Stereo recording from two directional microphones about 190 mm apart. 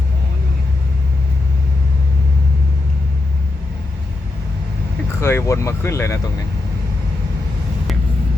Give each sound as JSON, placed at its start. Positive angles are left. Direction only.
{"t": 5.2, "sound": "speech", "side_deg": 15}